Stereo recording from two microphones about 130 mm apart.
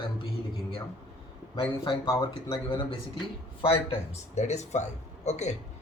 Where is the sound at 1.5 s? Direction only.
40° left (ahead or behind); by 5.5 s 60° left (ahead or behind).